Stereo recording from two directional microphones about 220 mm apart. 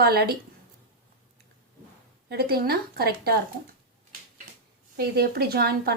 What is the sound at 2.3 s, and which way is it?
A woman's voice, 45° right (ahead or behind).